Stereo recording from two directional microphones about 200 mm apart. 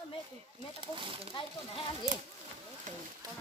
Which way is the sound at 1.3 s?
25° left (ahead or behind).